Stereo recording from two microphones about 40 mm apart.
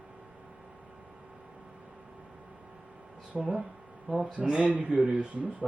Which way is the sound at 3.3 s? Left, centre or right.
Right.